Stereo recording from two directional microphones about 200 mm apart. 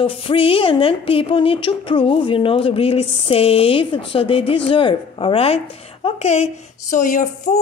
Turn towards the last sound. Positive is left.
turn(degrees=40)  # may be behind; listen again after turning